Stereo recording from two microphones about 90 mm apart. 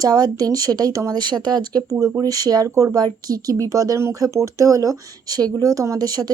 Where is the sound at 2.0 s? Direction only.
40° right (ahead or behind).